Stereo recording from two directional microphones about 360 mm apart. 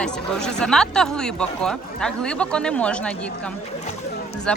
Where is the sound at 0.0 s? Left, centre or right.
Centre.